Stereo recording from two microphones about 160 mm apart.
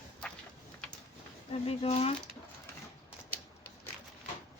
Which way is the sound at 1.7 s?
40° left (ahead or behind).